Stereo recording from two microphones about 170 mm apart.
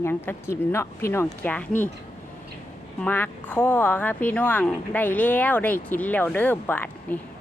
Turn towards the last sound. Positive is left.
turn(degrees=10)  # may be behind; listen again after turning